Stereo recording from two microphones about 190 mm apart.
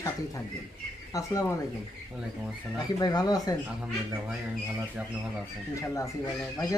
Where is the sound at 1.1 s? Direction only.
15° left (ahead or behind).